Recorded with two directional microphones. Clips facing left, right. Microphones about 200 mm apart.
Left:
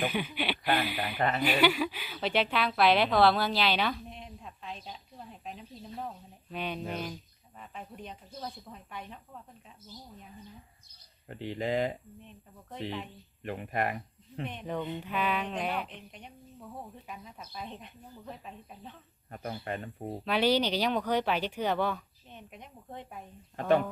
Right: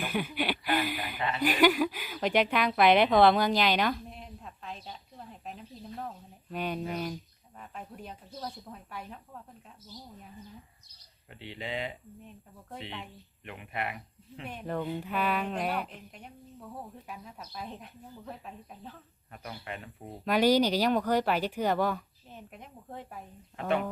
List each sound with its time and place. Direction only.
0.1 s speech: 10° right (ahead or behind)
1.2 s speech: 50° left (ahead or behind)
1.5 s a woman's voice: 10° right (ahead or behind)
11.3 s speech: 45° left (ahead or behind)
13.4 s speech: 40° left (ahead or behind)
14.4 s a woman's voice: 5° right (ahead or behind)
19.3 s speech: 40° left (ahead or behind)
20.2 s speech: 10° right (ahead or behind)
23.6 s speech: 35° left (ahead or behind)